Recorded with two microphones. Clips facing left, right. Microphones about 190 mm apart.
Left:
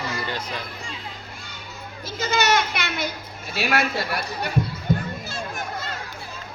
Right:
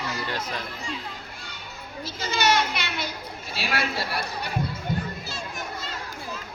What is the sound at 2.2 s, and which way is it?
Speech, 45° left (ahead or behind).